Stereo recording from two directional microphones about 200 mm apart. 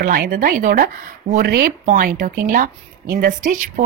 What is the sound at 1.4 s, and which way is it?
A woman's voice, 50° right (ahead or behind).